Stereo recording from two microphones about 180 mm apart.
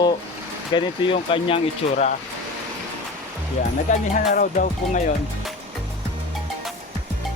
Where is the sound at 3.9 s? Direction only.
45° left (ahead or behind).